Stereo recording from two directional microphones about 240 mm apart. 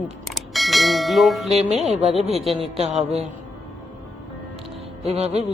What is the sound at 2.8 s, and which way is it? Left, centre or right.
Speech, right.